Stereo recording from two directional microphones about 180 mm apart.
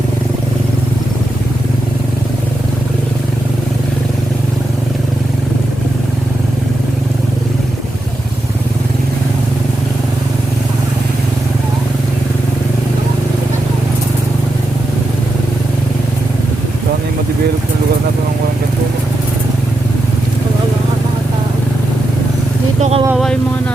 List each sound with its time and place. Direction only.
22.8 s vehicle: 35° right (ahead or behind)
23.1 s vehicle: centre (ahead or behind)